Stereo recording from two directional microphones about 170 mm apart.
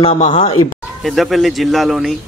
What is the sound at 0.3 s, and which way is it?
Speech, 35° left (ahead or behind).